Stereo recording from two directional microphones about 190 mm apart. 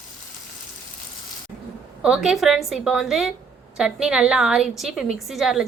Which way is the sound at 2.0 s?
5° right (ahead or behind).